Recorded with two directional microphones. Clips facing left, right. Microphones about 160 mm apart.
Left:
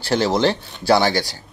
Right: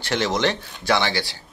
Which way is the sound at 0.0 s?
35° left (ahead or behind).